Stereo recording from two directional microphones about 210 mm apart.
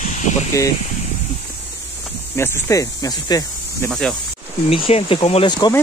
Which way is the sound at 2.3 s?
15° left (ahead or behind).